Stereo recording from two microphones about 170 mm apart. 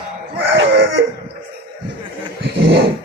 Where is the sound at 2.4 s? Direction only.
70° right (ahead or behind).